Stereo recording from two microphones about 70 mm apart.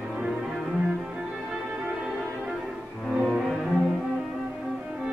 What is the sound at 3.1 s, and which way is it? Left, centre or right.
Cello, centre.